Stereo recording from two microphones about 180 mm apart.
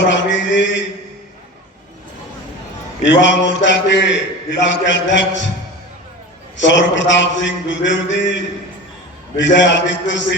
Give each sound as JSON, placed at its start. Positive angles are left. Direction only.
{"t": 0.0, "sound": "a man's voice", "side_deg": 90}
{"t": 3.0, "sound": "a man's voice", "side_deg": 90}
{"t": 6.6, "sound": "a man's voice", "side_deg": 90}